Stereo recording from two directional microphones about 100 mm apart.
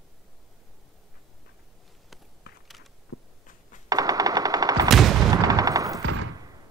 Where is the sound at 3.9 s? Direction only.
35° right (ahead or behind).